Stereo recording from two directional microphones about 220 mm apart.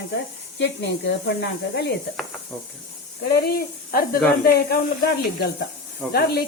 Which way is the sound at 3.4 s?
45° left (ahead or behind).